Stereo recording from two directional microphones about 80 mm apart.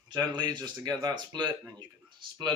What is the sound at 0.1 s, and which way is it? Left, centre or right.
Speech, right.